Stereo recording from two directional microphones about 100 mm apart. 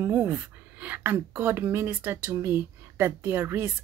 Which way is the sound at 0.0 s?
20° right (ahead or behind).